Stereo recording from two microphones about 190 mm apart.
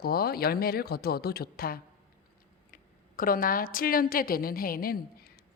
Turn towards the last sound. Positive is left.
turn(degrees=50)  # may be behind; listen again after turning